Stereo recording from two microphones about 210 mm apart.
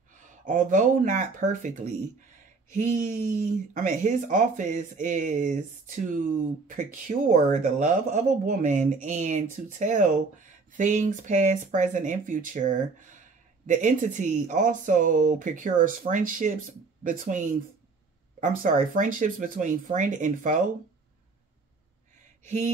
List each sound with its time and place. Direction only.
0.1 s speech: 40° right (ahead or behind)